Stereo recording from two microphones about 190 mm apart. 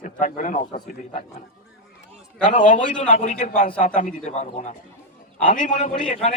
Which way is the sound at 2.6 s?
40° left (ahead or behind).